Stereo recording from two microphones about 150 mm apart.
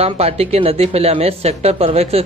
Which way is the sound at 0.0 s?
40° right (ahead or behind).